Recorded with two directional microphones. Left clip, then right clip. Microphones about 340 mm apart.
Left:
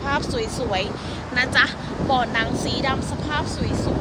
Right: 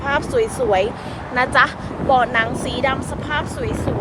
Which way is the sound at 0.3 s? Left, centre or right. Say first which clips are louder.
Right 7 dB; centre.